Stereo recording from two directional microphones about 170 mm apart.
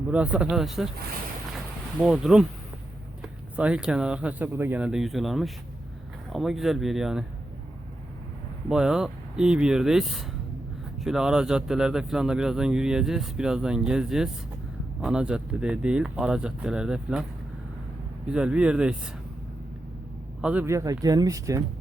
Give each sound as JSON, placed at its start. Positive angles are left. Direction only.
{"t": 0.1, "sound": "speech", "side_deg": -10}
{"t": 2.0, "sound": "speech", "side_deg": -5}
{"t": 8.7, "sound": "speech", "side_deg": -5}
{"t": 18.3, "sound": "speech", "side_deg": -5}
{"t": 20.4, "sound": "speech", "side_deg": -10}